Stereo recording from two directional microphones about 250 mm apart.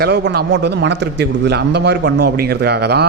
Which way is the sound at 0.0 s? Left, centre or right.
Right.